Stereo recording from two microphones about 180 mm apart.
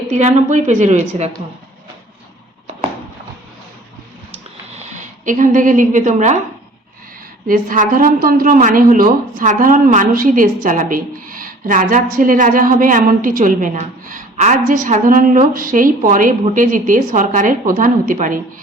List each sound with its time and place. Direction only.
0.1 s a woman's voice: 40° right (ahead or behind)
4.9 s a woman's voice: 45° right (ahead or behind)
7.4 s a woman's voice: 50° right (ahead or behind)